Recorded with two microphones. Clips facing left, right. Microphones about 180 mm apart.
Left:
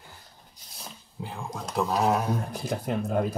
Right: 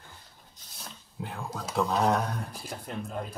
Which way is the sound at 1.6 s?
Centre (ahead or behind).